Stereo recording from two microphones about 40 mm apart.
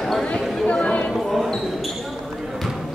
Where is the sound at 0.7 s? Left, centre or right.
Left.